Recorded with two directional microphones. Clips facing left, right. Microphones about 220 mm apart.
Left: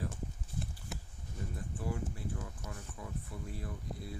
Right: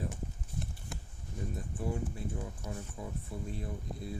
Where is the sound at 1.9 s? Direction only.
25° right (ahead or behind).